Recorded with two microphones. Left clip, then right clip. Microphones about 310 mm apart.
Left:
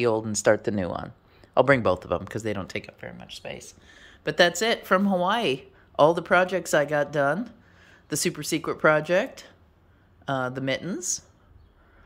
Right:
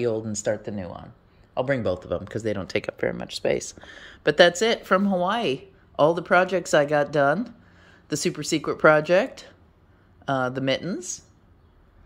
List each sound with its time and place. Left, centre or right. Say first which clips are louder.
0.0 s speech: left 3 dB; centre
0.6 s speech: left 6 dB; centre
2.9 s speech: right 12 dB; centre